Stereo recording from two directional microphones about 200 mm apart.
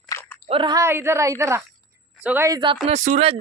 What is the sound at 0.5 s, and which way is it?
A woman's voice, 25° right (ahead or behind).